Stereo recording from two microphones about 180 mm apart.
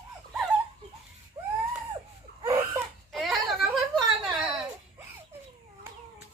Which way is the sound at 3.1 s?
Centre (ahead or behind).